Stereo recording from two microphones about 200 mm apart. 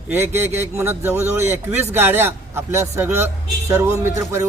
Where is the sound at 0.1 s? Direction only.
10° right (ahead or behind).